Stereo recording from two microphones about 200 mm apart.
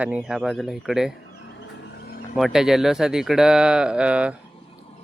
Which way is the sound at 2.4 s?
Centre (ahead or behind).